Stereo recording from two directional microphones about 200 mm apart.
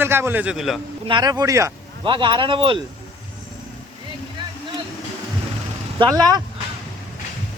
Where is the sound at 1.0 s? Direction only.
20° right (ahead or behind).